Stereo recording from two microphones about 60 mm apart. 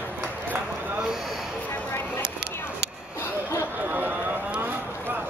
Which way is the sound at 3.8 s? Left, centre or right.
Right.